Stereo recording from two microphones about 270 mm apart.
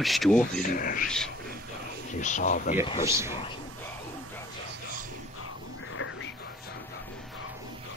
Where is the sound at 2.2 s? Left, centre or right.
Left.